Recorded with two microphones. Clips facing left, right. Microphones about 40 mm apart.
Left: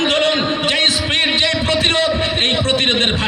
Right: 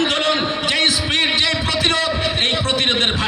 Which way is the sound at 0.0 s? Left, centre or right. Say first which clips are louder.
Left 2 dB; left.